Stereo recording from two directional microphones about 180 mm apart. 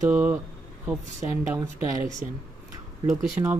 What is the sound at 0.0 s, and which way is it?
Speech, 10° right (ahead or behind).